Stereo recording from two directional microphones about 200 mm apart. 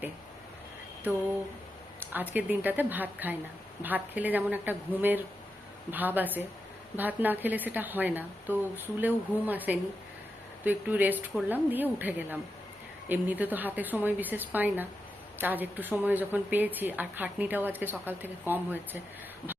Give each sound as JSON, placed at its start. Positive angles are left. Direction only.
{"t": 2.0, "sound": "a woman's voice", "side_deg": -10}